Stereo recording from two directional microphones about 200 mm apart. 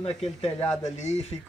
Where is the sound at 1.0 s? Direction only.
35° left (ahead or behind).